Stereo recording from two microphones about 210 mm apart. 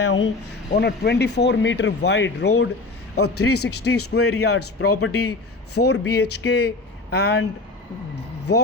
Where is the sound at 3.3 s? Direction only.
90° left.